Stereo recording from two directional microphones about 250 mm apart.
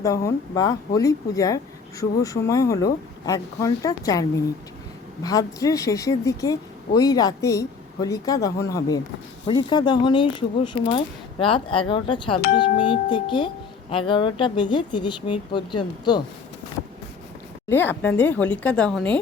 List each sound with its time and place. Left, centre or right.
0.0 s speech: centre
17.7 s a woman's voice: centre